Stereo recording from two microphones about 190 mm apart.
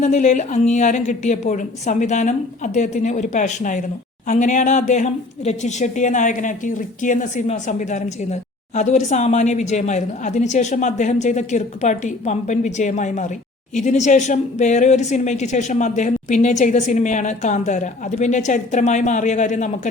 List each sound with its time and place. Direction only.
0.0 s speech: 40° left (ahead or behind)